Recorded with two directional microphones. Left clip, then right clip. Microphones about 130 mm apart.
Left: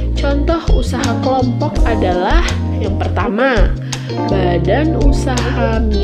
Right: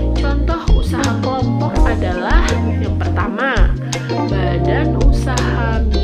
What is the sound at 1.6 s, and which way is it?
Speech, 35° left (ahead or behind).